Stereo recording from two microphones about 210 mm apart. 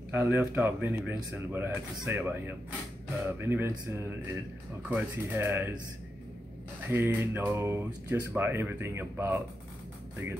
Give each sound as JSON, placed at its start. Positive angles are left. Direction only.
{"t": 0.1, "sound": "speech", "side_deg": -10}
{"t": 6.9, "sound": "speech", "side_deg": -10}